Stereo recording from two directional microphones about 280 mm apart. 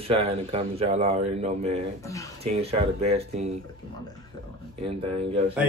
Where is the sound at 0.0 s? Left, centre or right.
Right.